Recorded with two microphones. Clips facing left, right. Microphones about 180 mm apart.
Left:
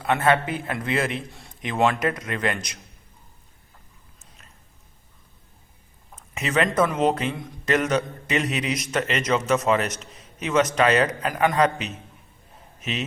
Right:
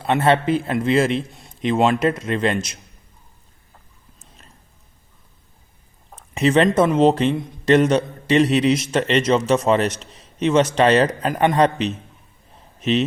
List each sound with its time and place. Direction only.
0.0 s a man's voice: 30° right (ahead or behind)
6.1 s a man's voice: 30° right (ahead or behind)